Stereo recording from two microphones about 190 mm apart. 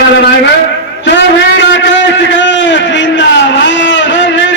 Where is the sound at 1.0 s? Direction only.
70° left (ahead or behind).